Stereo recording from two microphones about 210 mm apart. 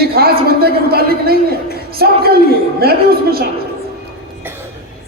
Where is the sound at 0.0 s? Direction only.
45° right (ahead or behind).